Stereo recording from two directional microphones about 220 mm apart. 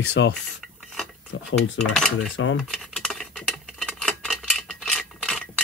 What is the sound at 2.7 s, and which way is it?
Patter, centre (ahead or behind).